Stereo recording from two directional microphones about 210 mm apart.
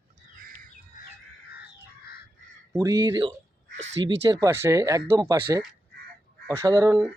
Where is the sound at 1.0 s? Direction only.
40° left (ahead or behind).